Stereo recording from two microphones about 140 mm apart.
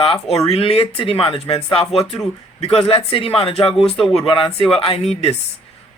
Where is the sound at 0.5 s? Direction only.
45° left (ahead or behind).